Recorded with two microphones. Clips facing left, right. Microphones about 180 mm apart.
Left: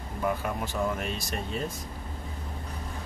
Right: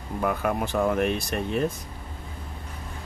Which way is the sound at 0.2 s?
60° right (ahead or behind).